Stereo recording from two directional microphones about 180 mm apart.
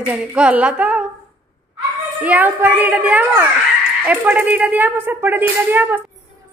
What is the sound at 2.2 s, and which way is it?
Speech, 10° right (ahead or behind).